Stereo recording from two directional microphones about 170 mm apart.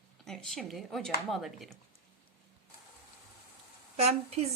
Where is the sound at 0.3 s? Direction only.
Centre (ahead or behind).